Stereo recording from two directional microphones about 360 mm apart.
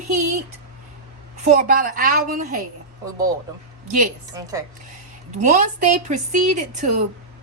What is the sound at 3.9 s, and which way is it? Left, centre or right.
Speech, right.